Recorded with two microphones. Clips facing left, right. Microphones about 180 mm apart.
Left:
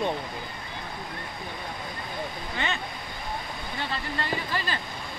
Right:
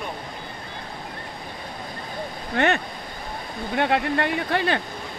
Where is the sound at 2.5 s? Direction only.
70° right (ahead or behind).